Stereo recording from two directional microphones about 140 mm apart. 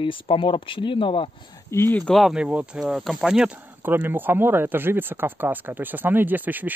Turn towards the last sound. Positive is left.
turn(degrees=-10)  # may be behind; listen again after turning